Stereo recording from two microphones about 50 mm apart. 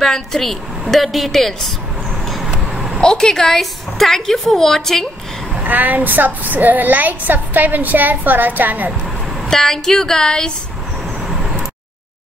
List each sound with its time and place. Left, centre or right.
0.0 s a woman's voice: centre
2.2 s vehicle: centre
2.5 s babbling: centre
3.0 s a woman's voice: centre
5.6 s a woman's voice: right
9.5 s a woman's voice: centre